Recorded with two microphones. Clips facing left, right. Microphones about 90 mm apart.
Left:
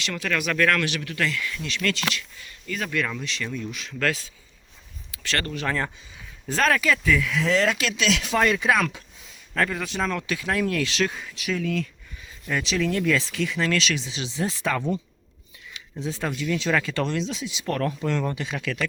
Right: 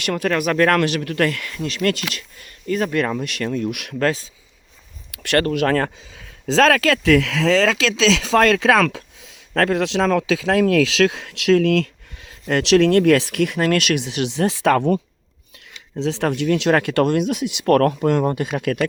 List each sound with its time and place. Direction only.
0.0 s speech: 45° right (ahead or behind); by 3.9 s 65° right (ahead or behind)
3.9 s speech: 35° right (ahead or behind)
5.1 s speech: 55° right (ahead or behind)
6.5 s speech: 90° right; by 15.0 s 60° right (ahead or behind)
16.0 s speech: 75° right (ahead or behind); by 18.9 s 50° right (ahead or behind)